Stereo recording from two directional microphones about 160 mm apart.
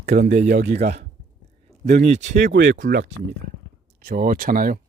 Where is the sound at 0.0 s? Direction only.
80° right.